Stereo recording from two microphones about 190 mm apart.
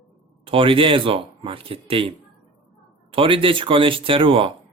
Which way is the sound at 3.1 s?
30° right (ahead or behind).